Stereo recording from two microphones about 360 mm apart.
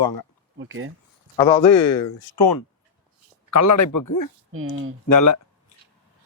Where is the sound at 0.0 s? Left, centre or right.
Left.